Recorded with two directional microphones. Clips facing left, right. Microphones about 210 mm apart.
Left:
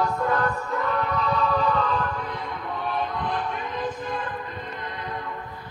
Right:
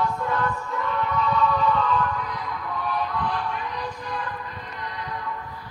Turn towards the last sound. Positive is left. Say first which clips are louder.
# even
turn(degrees=25)  # may be behind; listen again after turning